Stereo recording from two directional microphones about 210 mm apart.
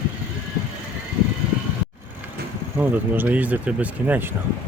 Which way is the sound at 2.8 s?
10° right (ahead or behind).